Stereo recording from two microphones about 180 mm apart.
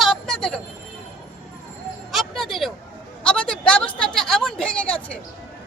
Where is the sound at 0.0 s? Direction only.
Centre (ahead or behind).